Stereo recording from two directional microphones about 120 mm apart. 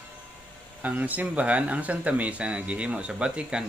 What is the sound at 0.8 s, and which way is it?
Speech, 10° right (ahead or behind).